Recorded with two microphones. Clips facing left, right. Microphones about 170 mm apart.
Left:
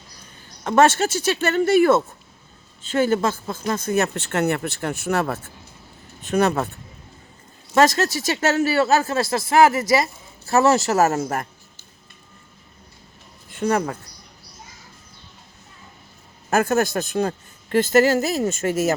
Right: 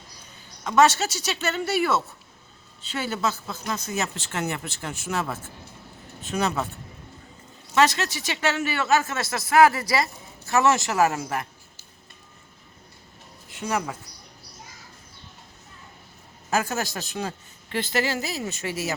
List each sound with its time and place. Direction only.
0.6 s a man's voice: 50° left (ahead or behind)
7.7 s speech: 40° left (ahead or behind); by 10.1 s 25° left (ahead or behind)
10.4 s speech: 35° left (ahead or behind)
13.5 s speech: 55° left (ahead or behind)
16.5 s a man's voice: 55° left (ahead or behind)